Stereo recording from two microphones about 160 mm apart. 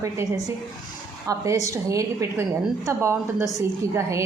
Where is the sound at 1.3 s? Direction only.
20° right (ahead or behind).